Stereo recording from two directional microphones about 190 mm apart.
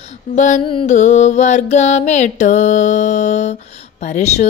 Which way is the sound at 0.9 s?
40° left (ahead or behind).